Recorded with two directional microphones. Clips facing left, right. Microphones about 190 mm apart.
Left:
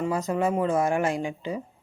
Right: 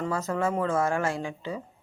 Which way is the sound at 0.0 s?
15° left (ahead or behind).